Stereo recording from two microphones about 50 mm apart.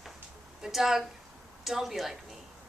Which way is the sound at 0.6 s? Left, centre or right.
Centre.